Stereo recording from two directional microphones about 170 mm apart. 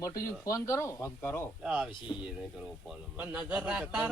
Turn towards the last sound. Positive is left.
turn(degrees=-5)  # may be behind; listen again after turning